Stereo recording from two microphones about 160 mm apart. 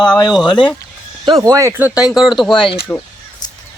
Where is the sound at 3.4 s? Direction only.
25° left (ahead or behind).